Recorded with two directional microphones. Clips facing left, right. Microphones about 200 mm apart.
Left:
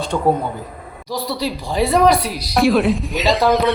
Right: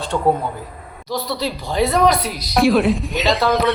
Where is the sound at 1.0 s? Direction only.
10° left (ahead or behind).